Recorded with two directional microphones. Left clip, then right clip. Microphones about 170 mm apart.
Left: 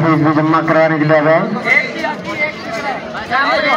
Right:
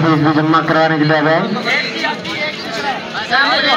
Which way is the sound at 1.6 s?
80° left.